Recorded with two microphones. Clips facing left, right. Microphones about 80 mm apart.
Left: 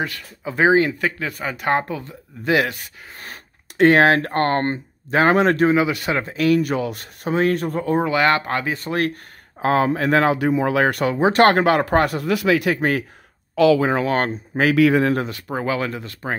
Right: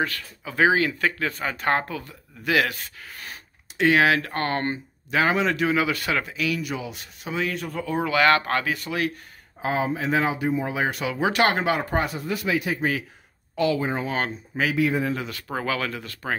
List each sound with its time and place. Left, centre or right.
0.0 s speech: left
1.2 s speech: centre
3.2 s speech: left
5.7 s speech: left
6.2 s speech: left
8.0 s speech: left
8.7 s speech: left
9.6 s speech: left
11.1 s speech: left
11.4 s speech: left
13.6 s speech: left
14.1 s speech: left
14.7 s speech: left
15.4 s speech: centre